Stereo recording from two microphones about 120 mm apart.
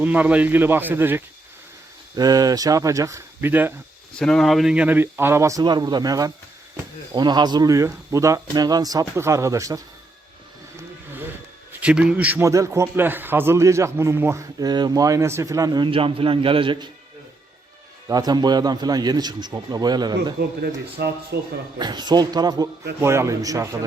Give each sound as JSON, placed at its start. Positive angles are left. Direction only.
{"t": 0.0, "sound": "a man's voice", "side_deg": -10}
{"t": 2.1, "sound": "speech", "side_deg": -30}
{"t": 4.2, "sound": "speech", "side_deg": 5}
{"t": 11.7, "sound": "a man's voice", "side_deg": -10}
{"t": 12.5, "sound": "speech", "side_deg": -25}
{"t": 14.6, "sound": "speech", "side_deg": -35}
{"t": 15.9, "sound": "a man's voice", "side_deg": -50}
{"t": 18.1, "sound": "a man's voice", "side_deg": -35}
{"t": 21.8, "sound": "a man's voice", "side_deg": -35}